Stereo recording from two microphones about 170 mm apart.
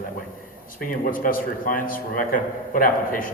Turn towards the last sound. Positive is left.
turn(degrees=55)  # may be behind; listen again after turning